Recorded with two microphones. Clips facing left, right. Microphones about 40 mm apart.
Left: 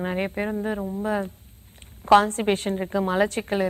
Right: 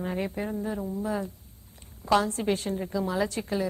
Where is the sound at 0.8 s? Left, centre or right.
Left.